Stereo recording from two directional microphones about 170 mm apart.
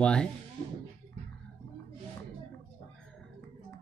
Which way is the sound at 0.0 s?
5° left (ahead or behind).